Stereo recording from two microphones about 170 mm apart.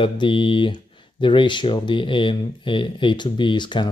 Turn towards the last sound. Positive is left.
turn(degrees=25)  # may be behind; listen again after turning